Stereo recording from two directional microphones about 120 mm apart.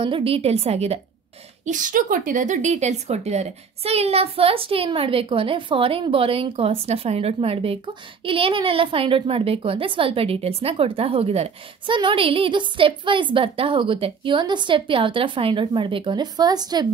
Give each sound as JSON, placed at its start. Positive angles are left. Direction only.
{"t": 0.0, "sound": "a woman's voice", "side_deg": -50}
{"t": 1.7, "sound": "a woman's voice", "side_deg": -90}